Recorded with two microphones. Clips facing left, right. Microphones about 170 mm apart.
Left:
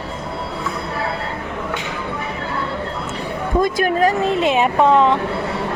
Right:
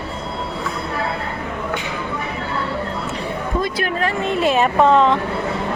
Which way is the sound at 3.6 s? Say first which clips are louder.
Left 8 dB; 45° left (ahead or behind).